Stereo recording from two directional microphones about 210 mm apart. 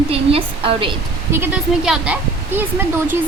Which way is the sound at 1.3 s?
10° right (ahead or behind).